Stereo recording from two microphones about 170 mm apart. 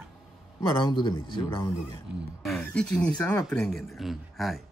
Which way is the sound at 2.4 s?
5° left (ahead or behind).